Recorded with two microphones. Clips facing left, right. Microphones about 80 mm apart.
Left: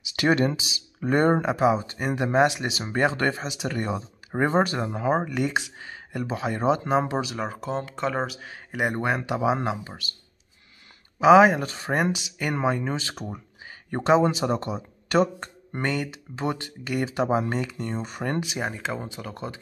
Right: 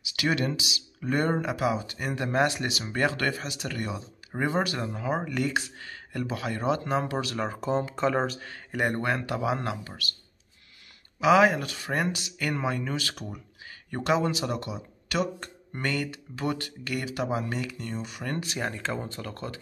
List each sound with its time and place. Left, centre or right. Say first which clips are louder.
0.0 s speech: left 6 dB; left
3.6 s speech: left 7 dB; left
5.3 s speech: left 2 dB; left
7.3 s speech: right 1 dB; centre; by 10.0 s left
11.1 s speech: left 5 dB; left
18.4 s speech: left 2 dB; centre